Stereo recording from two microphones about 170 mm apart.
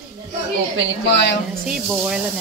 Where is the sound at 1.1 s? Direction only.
75° left (ahead or behind).